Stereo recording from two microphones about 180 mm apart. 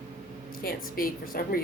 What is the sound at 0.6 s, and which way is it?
A woman's voice, 55° left (ahead or behind).